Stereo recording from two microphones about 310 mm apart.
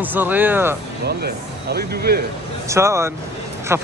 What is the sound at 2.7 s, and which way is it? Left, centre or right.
Speech, centre.